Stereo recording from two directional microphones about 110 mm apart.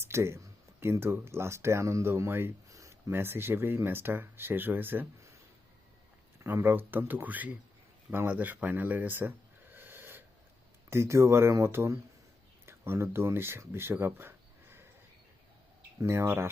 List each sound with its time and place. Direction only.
0.0 s speech: 25° right (ahead or behind)
6.4 s speech: 20° right (ahead or behind)
9.7 s snort: 20° right (ahead or behind)
10.8 s speech: 25° right (ahead or behind)
16.0 s speech: 25° right (ahead or behind)